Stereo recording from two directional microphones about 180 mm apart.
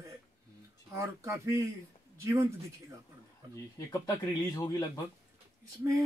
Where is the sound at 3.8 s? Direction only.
20° left (ahead or behind).